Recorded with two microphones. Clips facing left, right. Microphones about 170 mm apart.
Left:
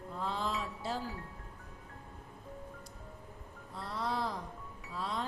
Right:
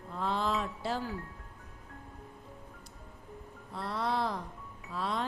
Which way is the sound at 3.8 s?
65° right (ahead or behind).